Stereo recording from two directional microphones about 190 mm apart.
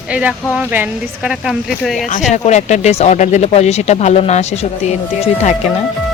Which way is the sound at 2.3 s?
35° left (ahead or behind).